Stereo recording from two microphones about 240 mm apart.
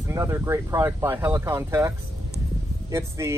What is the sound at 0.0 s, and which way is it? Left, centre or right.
Speech, centre.